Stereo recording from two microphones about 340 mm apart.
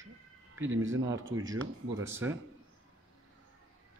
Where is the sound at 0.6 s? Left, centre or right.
Right.